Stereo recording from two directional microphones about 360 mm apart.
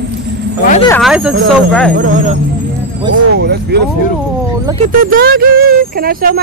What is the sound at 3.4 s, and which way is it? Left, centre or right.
Speech, right.